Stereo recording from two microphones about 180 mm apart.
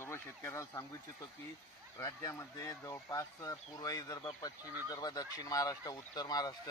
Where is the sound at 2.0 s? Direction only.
20° left (ahead or behind).